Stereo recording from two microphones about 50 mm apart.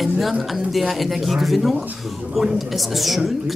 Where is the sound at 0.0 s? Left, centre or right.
Centre.